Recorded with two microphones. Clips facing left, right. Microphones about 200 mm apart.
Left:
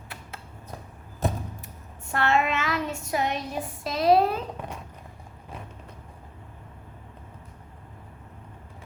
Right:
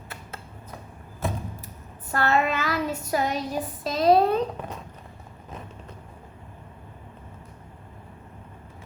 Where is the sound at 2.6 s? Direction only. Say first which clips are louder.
Right 2 dB; centre (ahead or behind).